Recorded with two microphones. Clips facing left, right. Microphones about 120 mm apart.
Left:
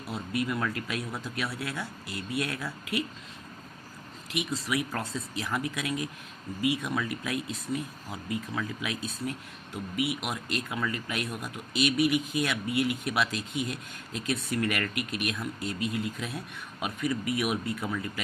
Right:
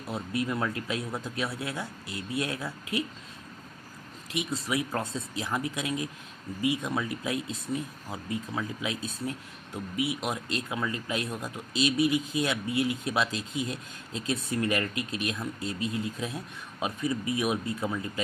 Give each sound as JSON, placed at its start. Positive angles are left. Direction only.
{"t": 0.1, "sound": "speech", "side_deg": -30}
{"t": 4.4, "sound": "speech", "side_deg": -25}